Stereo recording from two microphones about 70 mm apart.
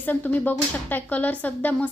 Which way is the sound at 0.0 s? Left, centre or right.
Left.